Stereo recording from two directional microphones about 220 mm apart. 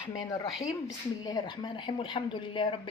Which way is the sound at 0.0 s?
15° left (ahead or behind).